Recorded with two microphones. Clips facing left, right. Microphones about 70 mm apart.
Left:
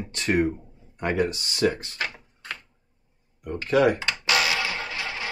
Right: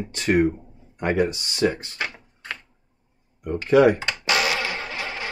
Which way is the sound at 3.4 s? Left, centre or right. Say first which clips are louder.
Right 4 dB; right.